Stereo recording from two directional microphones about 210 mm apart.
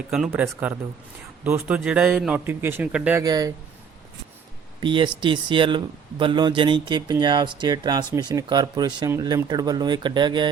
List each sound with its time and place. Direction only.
0.1 s speech: 5° right (ahead or behind)
4.8 s speech: 20° right (ahead or behind)